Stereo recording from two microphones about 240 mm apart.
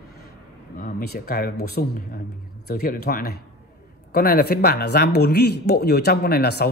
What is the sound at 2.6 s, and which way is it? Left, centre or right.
Speech, left.